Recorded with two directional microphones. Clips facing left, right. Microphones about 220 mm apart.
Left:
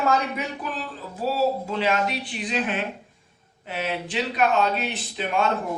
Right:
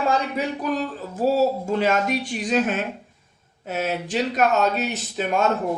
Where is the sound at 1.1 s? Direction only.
45° right (ahead or behind).